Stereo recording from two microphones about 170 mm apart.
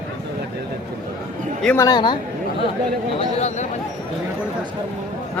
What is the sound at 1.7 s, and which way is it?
Speech, 25° left (ahead or behind).